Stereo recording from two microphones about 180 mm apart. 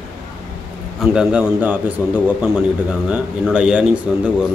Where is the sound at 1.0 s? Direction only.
5° right (ahead or behind).